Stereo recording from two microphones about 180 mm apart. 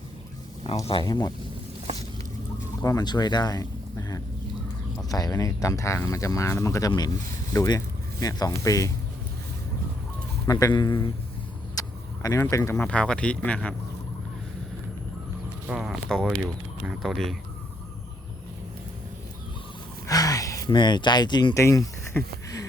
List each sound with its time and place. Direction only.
0.9 s speech: 25° left (ahead or behind)
2.8 s speech: 20° left (ahead or behind)
10.4 s speech: 20° left (ahead or behind)
11.7 s vehicle: 20° left (ahead or behind)
12.7 s speech: 5° left (ahead or behind)
15.6 s speech: 5° right (ahead or behind)
20.1 s speech: 20° left (ahead or behind)